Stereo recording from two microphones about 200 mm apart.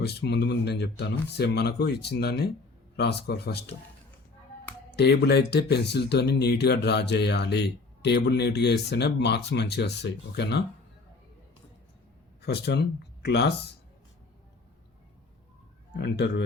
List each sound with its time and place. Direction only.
0.0 s speech: 55° left (ahead or behind)
4.9 s speech: 55° left (ahead or behind)
12.4 s speech: 55° left (ahead or behind)
16.0 s speech: 55° left (ahead or behind)